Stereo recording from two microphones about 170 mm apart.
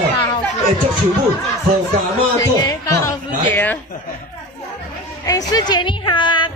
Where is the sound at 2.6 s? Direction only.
20° left (ahead or behind).